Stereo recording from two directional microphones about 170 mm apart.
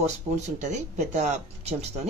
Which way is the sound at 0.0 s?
40° right (ahead or behind).